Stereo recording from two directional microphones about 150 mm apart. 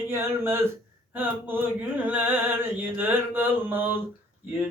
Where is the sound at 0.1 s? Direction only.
15° right (ahead or behind).